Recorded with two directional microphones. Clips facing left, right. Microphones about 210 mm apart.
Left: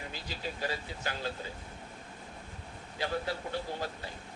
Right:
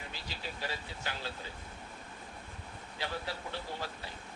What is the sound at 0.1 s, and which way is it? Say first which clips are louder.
Speech: left 4 dB; 45° left (ahead or behind).